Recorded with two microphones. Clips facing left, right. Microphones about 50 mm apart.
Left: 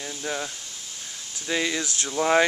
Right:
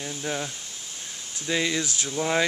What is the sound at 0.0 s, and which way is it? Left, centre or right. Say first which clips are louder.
Speech: even; centre.